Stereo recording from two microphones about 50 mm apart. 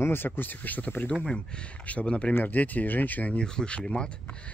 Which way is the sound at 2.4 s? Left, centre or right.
Left.